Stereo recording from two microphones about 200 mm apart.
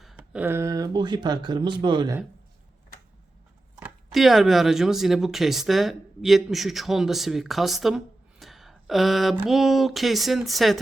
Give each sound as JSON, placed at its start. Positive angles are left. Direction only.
{"t": 0.0, "sound": "speech", "side_deg": -5}
{"t": 3.8, "sound": "speech", "side_deg": -5}